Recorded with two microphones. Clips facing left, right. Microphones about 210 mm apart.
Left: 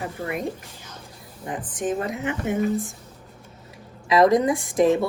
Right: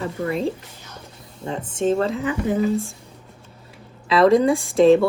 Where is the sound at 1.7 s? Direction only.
25° right (ahead or behind).